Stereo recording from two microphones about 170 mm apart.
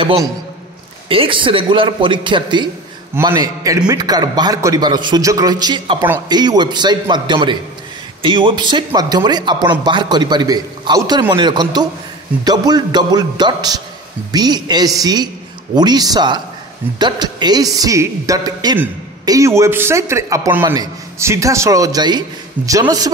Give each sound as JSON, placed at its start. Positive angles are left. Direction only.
{"t": 1.0, "sound": "a man's voice", "side_deg": -30}